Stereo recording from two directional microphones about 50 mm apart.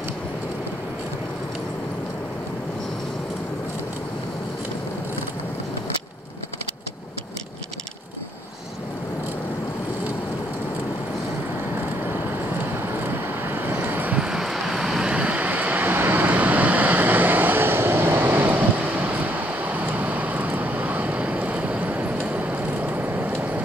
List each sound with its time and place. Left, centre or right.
13.0 s vehicle: right
14.1 s vehicle: centre
15.1 s vehicle: right
18.4 s vehicle: right